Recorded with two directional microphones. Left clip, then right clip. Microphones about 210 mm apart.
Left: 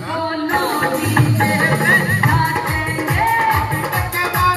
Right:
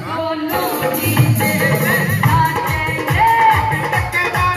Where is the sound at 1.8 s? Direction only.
30° left (ahead or behind).